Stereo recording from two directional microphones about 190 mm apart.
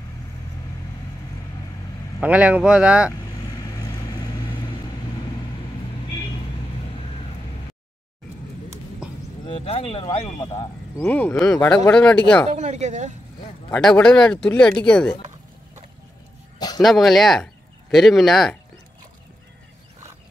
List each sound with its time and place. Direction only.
2.2 s speech: 5° right (ahead or behind)
3.1 s vehicle: 20° left (ahead or behind)
9.5 s speech: 30° left (ahead or behind)
11.0 s speech: 10° left (ahead or behind)
12.5 s speech: 40° right (ahead or behind)
13.7 s speech: 5° left (ahead or behind)
16.5 s a sound: 20° left (ahead or behind)
16.8 s speech: centre (ahead or behind)